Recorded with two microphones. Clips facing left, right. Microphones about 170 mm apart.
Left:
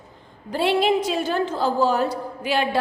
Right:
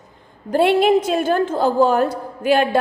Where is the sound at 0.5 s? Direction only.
50° right (ahead or behind).